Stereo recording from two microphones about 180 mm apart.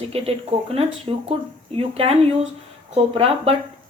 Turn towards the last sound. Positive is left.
turn(degrees=-35)  # may be behind; listen again after turning